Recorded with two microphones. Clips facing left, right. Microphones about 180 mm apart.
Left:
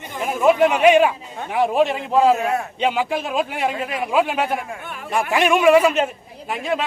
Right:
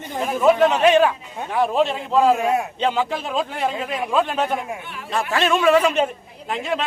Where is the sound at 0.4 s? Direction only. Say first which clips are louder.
Left 1 dB; 10° left (ahead or behind).